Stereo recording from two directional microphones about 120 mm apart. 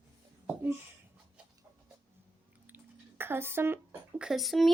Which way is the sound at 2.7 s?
15° right (ahead or behind).